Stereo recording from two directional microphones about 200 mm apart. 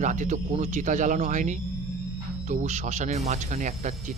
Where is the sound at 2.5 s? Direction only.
35° right (ahead or behind).